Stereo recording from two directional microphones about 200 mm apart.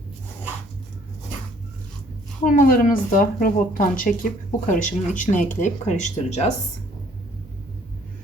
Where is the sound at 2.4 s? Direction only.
40° left (ahead or behind).